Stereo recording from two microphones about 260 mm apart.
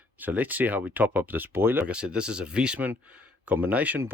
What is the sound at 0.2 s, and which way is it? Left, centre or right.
Speech, centre.